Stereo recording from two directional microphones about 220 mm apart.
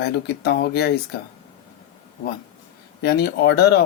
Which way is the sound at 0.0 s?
50° left (ahead or behind).